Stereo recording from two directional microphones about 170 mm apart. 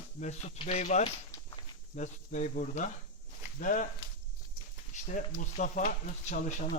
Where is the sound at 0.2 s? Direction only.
40° left (ahead or behind).